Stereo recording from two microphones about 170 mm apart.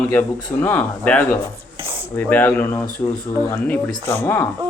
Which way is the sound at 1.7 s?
30° right (ahead or behind).